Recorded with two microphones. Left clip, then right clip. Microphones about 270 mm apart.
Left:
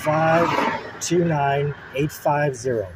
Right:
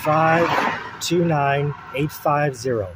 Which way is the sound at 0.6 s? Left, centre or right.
Centre.